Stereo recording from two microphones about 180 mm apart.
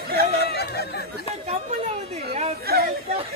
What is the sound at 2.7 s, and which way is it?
Chatter, 60° right (ahead or behind).